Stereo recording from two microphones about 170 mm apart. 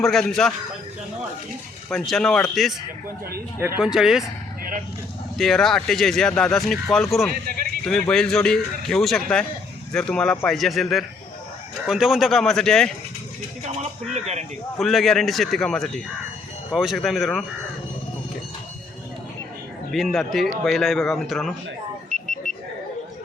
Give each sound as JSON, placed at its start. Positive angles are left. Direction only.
{"t": 0.0, "sound": "speech", "side_deg": 0}
{"t": 1.9, "sound": "speech", "side_deg": 0}
{"t": 3.8, "sound": "speech", "side_deg": -5}
{"t": 5.4, "sound": "speech", "side_deg": 0}
{"t": 7.4, "sound": "a sound", "side_deg": -60}
{"t": 7.9, "sound": "speech", "side_deg": 5}
{"t": 13.7, "sound": "a sound", "side_deg": -40}
{"t": 14.8, "sound": "speech", "side_deg": 0}
{"t": 19.9, "sound": "speech", "side_deg": 0}